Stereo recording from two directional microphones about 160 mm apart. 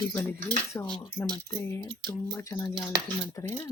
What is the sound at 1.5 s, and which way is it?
Speech, 20° left (ahead or behind).